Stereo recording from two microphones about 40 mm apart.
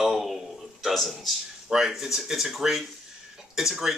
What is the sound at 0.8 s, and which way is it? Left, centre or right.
Speech, centre.